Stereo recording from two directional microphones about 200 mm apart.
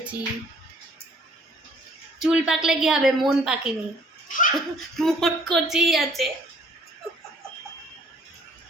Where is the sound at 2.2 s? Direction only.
5° right (ahead or behind).